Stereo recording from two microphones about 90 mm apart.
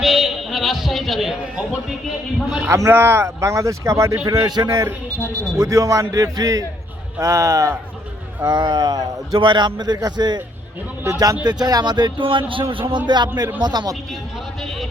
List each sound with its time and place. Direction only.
0.0 s a sound: centre (ahead or behind)
2.6 s speech: 30° right (ahead or behind)
3.4 s a man's voice: 35° right (ahead or behind)
4.3 s a man's voice: 45° right (ahead or behind)
8.4 s a man's voice: 50° right (ahead or behind)
11.0 s a man's voice: 40° right (ahead or behind)
12.2 s a man's voice: 70° right (ahead or behind)
13.1 s a man's voice: 55° right (ahead or behind)
14.1 s speech: centre (ahead or behind)